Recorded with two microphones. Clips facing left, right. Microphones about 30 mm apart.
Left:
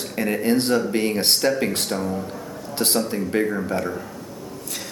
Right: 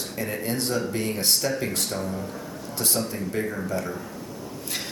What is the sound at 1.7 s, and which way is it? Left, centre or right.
Speech, left.